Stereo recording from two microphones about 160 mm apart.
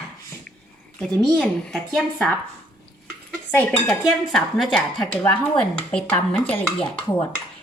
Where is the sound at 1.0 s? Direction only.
5° left (ahead or behind).